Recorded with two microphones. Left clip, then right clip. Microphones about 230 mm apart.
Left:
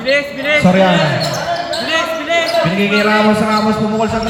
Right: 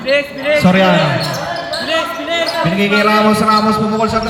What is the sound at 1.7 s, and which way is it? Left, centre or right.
Basketball bounce, centre.